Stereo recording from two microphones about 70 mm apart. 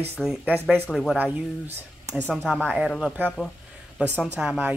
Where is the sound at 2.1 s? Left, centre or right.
Centre.